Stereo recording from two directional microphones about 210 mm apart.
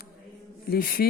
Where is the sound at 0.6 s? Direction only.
45° left (ahead or behind).